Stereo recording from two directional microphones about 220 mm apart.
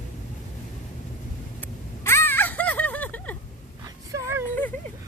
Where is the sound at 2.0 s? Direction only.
10° left (ahead or behind).